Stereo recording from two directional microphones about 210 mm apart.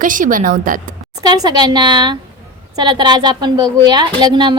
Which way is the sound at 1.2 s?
20° right (ahead or behind).